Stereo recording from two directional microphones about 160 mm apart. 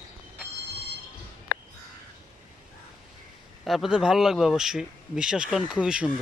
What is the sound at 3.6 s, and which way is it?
Speech, centre (ahead or behind).